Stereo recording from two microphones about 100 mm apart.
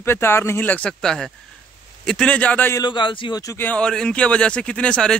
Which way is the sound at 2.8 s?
50° left (ahead or behind).